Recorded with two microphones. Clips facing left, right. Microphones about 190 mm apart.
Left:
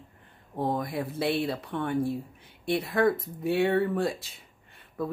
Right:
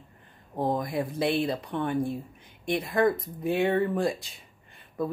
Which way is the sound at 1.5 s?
20° right (ahead or behind).